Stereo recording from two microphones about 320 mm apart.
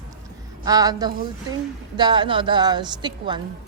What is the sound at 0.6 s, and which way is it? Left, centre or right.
Speech, centre.